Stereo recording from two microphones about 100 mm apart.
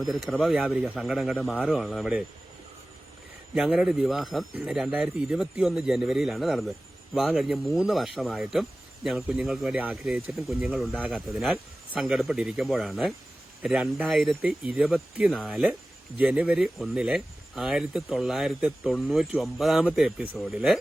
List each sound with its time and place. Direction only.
0.0 s speech: centre (ahead or behind)
0.5 s speech: 10° right (ahead or behind)
1.4 s speech: 15° left (ahead or behind)
1.6 s speech: centre (ahead or behind)
3.6 s speech: 5° right (ahead or behind)
15.3 s speech: 5° left (ahead or behind)
16.1 s speech: 10° right (ahead or behind)